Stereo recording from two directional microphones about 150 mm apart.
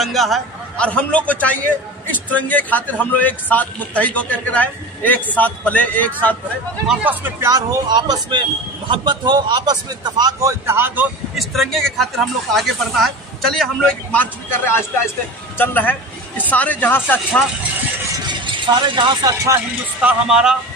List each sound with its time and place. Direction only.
0.0 s a man's voice: centre (ahead or behind)
6.9 s speech: 10° right (ahead or behind)
11.3 s a man's voice: centre (ahead or behind)
18.9 s speech: 30° right (ahead or behind)
20.0 s a man's voice: 5° right (ahead or behind)